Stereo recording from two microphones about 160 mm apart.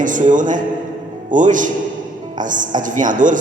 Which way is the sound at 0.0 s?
55° right (ahead or behind).